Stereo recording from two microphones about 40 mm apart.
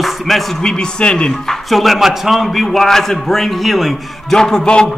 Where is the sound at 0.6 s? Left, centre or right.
Centre.